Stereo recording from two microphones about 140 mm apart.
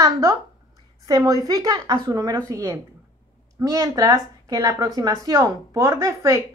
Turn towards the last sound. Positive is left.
turn(degrees=-20)  # may be behind; listen again after turning